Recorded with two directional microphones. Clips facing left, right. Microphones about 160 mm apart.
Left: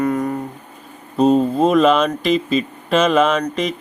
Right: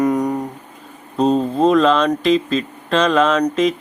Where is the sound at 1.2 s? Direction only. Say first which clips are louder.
Left 2 dB; 10° left (ahead or behind).